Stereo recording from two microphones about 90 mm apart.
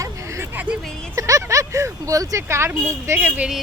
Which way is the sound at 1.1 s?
35° right (ahead or behind).